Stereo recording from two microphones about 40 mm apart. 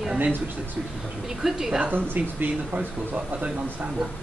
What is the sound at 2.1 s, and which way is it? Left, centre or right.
Speech, right.